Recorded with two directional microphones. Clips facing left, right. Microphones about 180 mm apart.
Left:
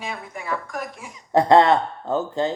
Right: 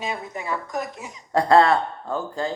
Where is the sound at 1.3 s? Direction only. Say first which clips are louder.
Left 2 dB; 20° left (ahead or behind).